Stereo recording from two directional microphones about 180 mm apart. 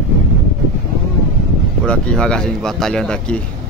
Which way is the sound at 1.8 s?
5° left (ahead or behind).